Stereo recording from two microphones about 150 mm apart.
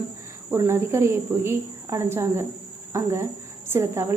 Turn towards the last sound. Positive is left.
turn(degrees=-15)  # may be behind; listen again after turning